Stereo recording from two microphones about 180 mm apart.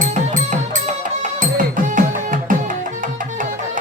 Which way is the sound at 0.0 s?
45° right (ahead or behind).